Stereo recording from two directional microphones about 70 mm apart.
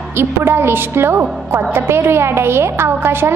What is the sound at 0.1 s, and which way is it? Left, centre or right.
A woman's voice, right.